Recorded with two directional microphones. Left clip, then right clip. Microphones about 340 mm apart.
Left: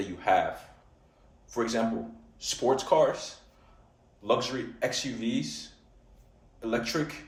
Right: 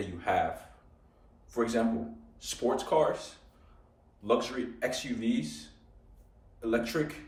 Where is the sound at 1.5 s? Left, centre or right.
Centre.